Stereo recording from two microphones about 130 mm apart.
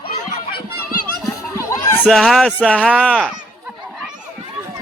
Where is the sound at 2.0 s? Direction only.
Centre (ahead or behind).